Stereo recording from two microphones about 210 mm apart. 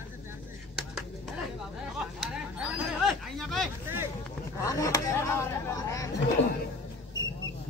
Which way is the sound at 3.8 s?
10° right (ahead or behind).